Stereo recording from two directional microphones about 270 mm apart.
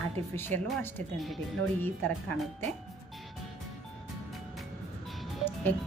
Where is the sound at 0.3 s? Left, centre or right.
Centre.